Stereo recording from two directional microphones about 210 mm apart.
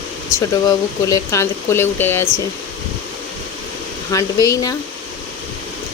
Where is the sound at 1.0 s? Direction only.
15° left (ahead or behind).